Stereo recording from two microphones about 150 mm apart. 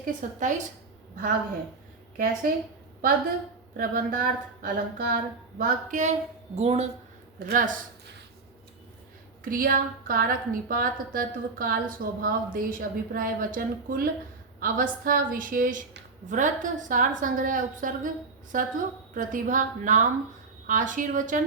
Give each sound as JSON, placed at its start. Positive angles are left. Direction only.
{"t": 0.0, "sound": "speech", "side_deg": -55}
{"t": 2.1, "sound": "a woman's voice", "side_deg": -70}
{"t": 3.8, "sound": "speech", "side_deg": -70}
{"t": 7.3, "sound": "speech", "side_deg": -75}
{"t": 9.4, "sound": "a woman's voice", "side_deg": -70}